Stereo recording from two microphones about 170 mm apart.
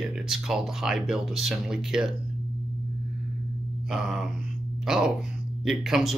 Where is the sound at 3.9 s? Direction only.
5° right (ahead or behind).